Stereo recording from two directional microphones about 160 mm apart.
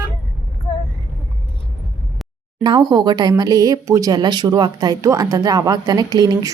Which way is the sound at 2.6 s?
25° right (ahead or behind).